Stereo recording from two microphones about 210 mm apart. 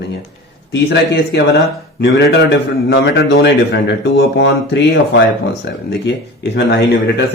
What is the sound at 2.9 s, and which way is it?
A man's voice, 50° left (ahead or behind).